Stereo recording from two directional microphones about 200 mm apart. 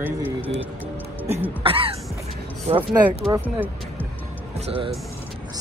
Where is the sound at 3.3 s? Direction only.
15° right (ahead or behind).